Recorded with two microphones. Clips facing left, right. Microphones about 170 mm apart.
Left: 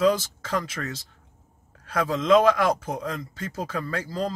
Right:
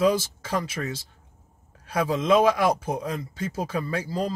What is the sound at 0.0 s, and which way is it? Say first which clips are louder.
Speech: even; 10° right (ahead or behind).